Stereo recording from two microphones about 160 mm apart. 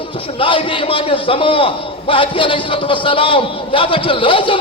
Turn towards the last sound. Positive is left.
turn(degrees=35)  # may be behind; listen again after turning